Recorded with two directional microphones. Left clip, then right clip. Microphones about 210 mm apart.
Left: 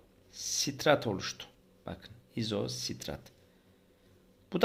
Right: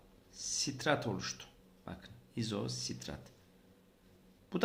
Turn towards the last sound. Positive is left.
turn(degrees=30)  # may be behind; listen again after turning